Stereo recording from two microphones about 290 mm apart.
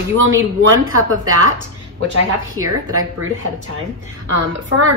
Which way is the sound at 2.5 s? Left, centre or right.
Right.